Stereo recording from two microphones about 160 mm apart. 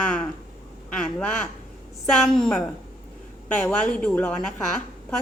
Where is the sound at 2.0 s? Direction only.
Centre (ahead or behind).